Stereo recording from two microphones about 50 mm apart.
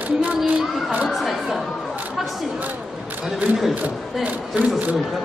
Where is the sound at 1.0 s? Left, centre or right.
Centre.